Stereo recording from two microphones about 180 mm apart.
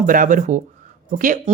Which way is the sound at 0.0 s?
50° right (ahead or behind).